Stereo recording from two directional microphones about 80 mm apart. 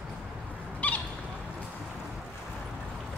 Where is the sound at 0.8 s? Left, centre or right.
Centre.